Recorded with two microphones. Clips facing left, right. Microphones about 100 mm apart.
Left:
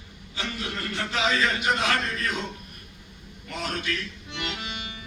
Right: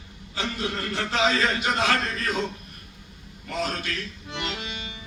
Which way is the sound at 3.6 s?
35° right (ahead or behind).